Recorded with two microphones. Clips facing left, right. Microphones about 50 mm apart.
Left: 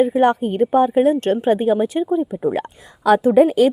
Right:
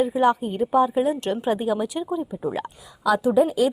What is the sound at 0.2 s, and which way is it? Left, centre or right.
A woman's voice, left.